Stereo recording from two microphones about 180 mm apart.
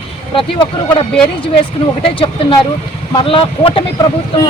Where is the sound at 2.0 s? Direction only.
30° left (ahead or behind).